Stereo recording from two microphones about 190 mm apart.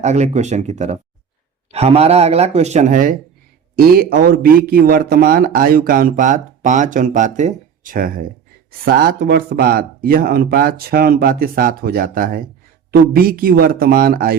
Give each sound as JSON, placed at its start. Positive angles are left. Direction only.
{"t": 0.0, "sound": "speech", "side_deg": -35}